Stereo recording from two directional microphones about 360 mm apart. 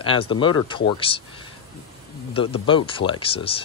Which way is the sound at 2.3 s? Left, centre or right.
Centre.